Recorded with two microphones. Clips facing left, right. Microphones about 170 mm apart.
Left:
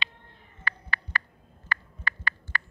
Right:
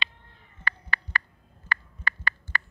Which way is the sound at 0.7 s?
70° right (ahead or behind).